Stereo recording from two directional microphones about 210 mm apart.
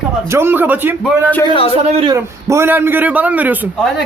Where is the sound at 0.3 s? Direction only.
10° right (ahead or behind).